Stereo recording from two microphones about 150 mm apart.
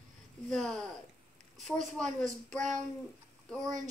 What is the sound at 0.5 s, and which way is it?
A woman's voice, 5° left (ahead or behind).